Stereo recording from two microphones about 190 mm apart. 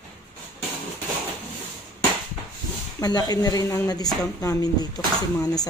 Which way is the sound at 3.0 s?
20° left (ahead or behind).